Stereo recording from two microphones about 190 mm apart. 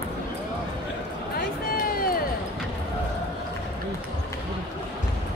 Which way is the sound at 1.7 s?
50° left (ahead or behind).